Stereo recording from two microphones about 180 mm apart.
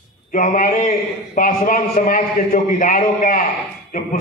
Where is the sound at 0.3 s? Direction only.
50° left (ahead or behind).